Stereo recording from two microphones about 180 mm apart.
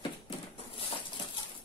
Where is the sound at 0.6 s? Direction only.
30° left (ahead or behind).